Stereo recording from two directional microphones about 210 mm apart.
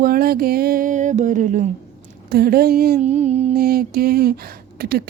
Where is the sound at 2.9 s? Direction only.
30° right (ahead or behind).